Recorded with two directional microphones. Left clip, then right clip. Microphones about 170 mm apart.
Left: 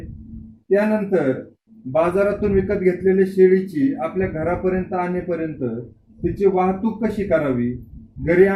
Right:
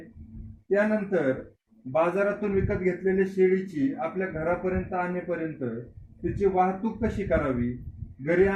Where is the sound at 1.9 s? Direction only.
10° right (ahead or behind).